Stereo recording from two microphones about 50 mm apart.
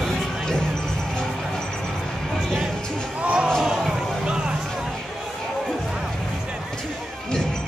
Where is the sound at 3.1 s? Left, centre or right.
Right.